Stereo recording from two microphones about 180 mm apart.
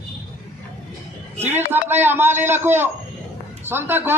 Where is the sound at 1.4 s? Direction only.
10° right (ahead or behind).